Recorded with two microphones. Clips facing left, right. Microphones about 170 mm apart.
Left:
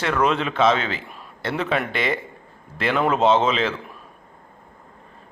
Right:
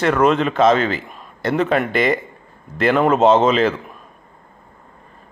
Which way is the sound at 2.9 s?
45° right (ahead or behind).